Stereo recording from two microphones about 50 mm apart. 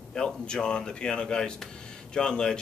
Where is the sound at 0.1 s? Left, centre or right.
Centre.